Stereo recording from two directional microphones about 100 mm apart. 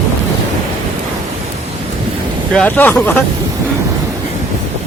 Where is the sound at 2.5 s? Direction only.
15° left (ahead or behind).